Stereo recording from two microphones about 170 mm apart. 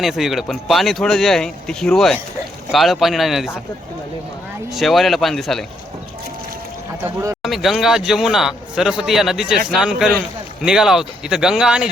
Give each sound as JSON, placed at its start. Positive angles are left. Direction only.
{"t": 0.0, "sound": "speech", "side_deg": 0}
{"t": 4.7, "sound": "speech", "side_deg": 0}
{"t": 7.0, "sound": "a man's voice", "side_deg": -20}
{"t": 7.4, "sound": "speech", "side_deg": 0}